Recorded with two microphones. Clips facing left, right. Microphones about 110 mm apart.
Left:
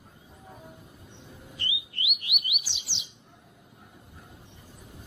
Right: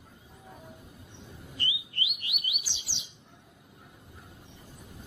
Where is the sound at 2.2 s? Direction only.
Centre (ahead or behind).